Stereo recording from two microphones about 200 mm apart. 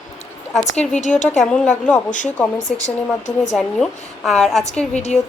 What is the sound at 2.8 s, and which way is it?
Speech, 35° left (ahead or behind).